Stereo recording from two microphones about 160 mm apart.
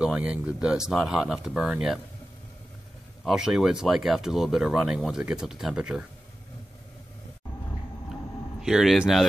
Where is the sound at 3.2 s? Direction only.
5° right (ahead or behind).